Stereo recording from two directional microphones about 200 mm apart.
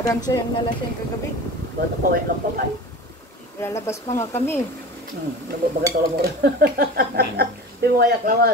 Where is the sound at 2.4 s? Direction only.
45° right (ahead or behind).